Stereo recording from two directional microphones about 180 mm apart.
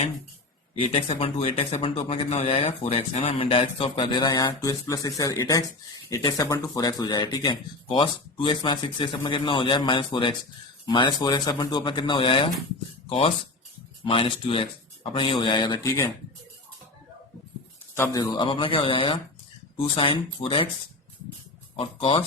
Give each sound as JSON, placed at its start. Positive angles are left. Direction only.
{"t": 0.8, "sound": "speech", "side_deg": 30}
{"t": 17.9, "sound": "speech", "side_deg": 15}
{"t": 21.8, "sound": "speech", "side_deg": 30}